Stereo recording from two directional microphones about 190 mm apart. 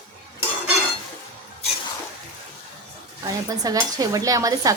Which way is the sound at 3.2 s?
20° right (ahead or behind).